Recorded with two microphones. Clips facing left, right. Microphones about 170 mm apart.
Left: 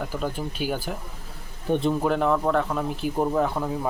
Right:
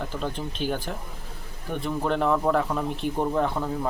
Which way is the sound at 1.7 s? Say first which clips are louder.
Left 6 dB; 20° left (ahead or behind).